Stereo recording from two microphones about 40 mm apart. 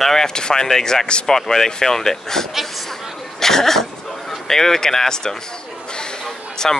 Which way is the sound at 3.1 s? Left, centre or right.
Centre.